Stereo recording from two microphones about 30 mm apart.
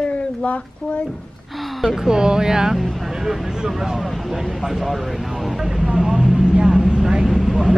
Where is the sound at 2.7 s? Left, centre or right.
Centre.